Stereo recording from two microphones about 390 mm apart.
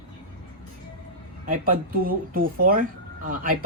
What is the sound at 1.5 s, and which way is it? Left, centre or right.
Speech, right.